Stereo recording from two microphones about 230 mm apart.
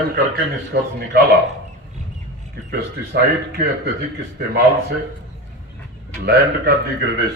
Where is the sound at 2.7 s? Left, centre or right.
Right.